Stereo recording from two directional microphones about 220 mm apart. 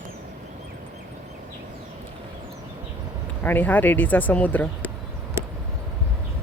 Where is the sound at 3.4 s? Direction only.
10° left (ahead or behind).